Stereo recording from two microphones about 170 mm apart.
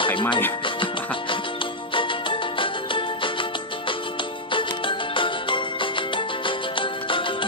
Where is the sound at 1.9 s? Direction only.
30° left (ahead or behind).